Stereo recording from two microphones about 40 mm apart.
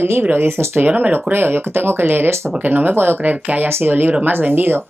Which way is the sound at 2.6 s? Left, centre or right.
Right.